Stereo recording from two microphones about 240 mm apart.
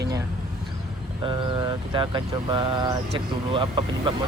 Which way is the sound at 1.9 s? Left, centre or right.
Centre.